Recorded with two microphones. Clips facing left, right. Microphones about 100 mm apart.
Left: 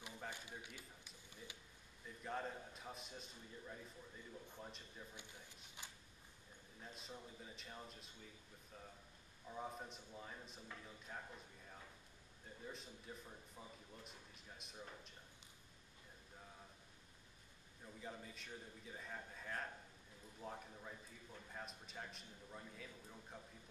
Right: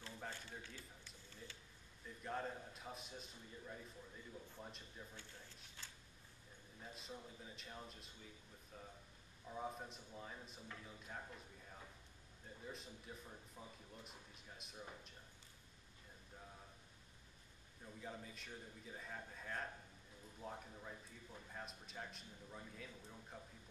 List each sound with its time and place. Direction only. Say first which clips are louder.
0.3 s a sound: even; 15° left (ahead or behind)
2.0 s a man's voice: right 1 dB; centre (ahead or behind)
5.1 s speech: even; 15° left (ahead or behind)
6.8 s a man's voice: right 1 dB; centre (ahead or behind)
12.6 s a man's voice: even; centre (ahead or behind)
17.8 s a man's voice: right 1 dB; centre (ahead or behind)